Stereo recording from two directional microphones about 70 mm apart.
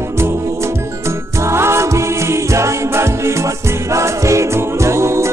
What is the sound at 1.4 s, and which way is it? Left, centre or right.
Music, right.